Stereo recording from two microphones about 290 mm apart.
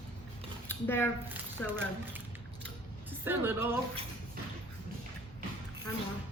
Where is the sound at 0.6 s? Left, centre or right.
Centre.